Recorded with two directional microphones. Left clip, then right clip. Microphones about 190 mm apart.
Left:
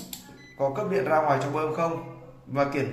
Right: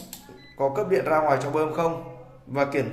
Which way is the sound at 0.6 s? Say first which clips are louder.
Right 3 dB; 50° right (ahead or behind).